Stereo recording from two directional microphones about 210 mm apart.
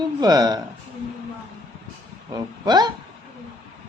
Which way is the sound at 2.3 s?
20° right (ahead or behind).